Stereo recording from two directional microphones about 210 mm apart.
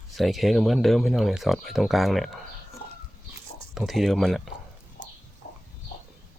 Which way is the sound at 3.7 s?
Centre (ahead or behind).